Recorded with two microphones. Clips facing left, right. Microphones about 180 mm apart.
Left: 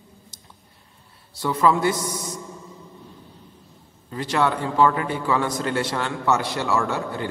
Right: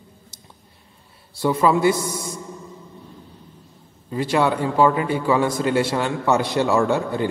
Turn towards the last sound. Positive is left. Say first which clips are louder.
# right 5 dB
turn(degrees=-20)  # may be behind; listen again after turning